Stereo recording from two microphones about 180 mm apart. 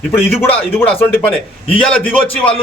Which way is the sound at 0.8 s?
10° left (ahead or behind).